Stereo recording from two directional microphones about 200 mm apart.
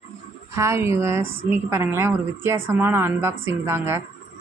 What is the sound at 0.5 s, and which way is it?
A woman's voice, 15° right (ahead or behind).